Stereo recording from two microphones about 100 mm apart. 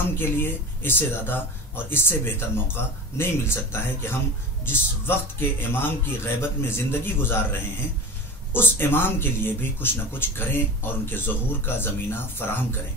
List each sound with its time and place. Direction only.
0.1 s speech: 20° left (ahead or behind)
8.5 s speech: 20° left (ahead or behind)